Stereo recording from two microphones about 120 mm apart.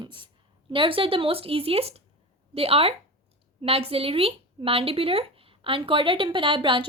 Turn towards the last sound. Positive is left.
turn(degrees=-45)  # may be behind; listen again after turning